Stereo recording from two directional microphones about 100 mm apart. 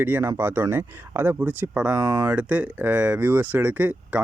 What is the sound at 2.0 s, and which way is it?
Speech, 40° right (ahead or behind).